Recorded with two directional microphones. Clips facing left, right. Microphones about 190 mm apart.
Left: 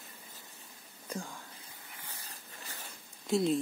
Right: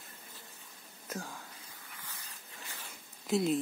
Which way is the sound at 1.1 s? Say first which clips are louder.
Left 1 dB; centre (ahead or behind).